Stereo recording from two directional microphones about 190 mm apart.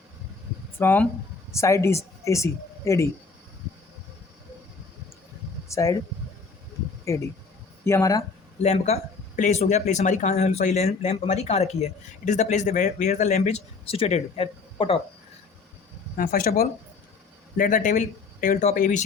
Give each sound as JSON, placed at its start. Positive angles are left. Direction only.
{"t": 0.8, "sound": "speech", "side_deg": 10}
{"t": 5.6, "sound": "speech", "side_deg": 15}
{"t": 7.0, "sound": "speech", "side_deg": 15}
{"t": 8.6, "sound": "speech", "side_deg": 35}
{"t": 16.1, "sound": "speech", "side_deg": 50}